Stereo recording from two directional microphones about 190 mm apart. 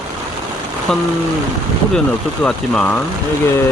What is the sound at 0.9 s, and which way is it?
Speech, centre (ahead or behind).